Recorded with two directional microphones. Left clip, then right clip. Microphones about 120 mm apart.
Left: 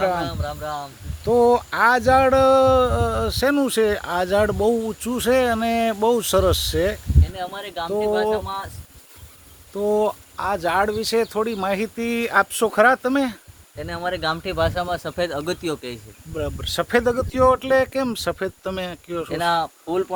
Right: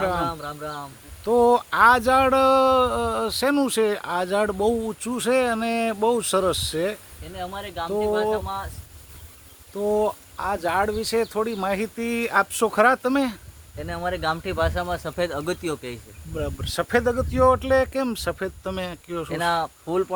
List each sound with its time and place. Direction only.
0.0 s speech: 10° right (ahead or behind); by 7.0 s 25° left (ahead or behind)
7.3 s speech: 45° left (ahead or behind)
9.7 s speech: 45° left (ahead or behind)
11.5 s speech: 25° left (ahead or behind); by 13.4 s centre (ahead or behind)
13.7 s speech: 10° left (ahead or behind)
14.5 s speech: 20° left (ahead or behind); by 16.0 s 55° left (ahead or behind)
16.3 s speech: 25° left (ahead or behind)
18.7 s speech: 10° left (ahead or behind)